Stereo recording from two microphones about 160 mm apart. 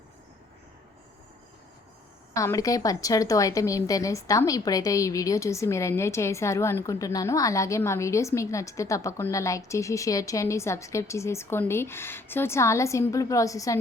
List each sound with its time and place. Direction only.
2.3 s a woman's voice: 20° left (ahead or behind)